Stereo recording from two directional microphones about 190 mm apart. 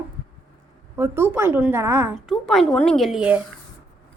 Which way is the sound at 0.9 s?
15° right (ahead or behind).